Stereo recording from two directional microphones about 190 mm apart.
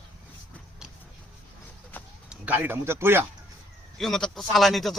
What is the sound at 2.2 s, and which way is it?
Speech, 10° right (ahead or behind).